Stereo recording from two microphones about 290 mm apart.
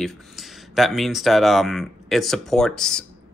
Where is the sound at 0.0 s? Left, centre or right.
Centre.